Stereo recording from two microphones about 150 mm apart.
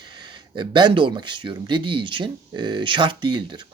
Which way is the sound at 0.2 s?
30° right (ahead or behind).